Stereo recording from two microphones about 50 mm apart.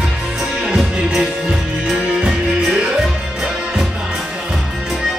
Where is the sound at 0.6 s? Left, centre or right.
Centre.